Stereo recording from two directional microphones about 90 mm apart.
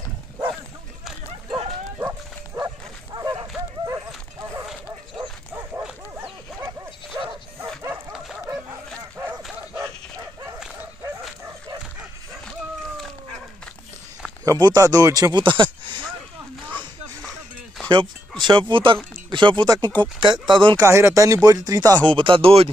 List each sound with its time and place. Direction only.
2.0 s bow-wow: 35° right (ahead or behind)
3.1 s dog: 65° right (ahead or behind)
3.8 s dog: 40° right (ahead or behind)
12.4 s a sound: 5° left (ahead or behind)
14.4 s speech: 45° right (ahead or behind)
15.3 s a sound: 65° right (ahead or behind)
18.4 s speech: 60° right (ahead or behind)
20.8 s speech: 30° right (ahead or behind)
22.1 s speech: 70° right (ahead or behind)